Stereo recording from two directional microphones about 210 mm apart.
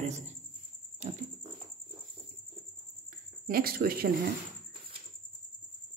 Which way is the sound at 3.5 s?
45° right (ahead or behind).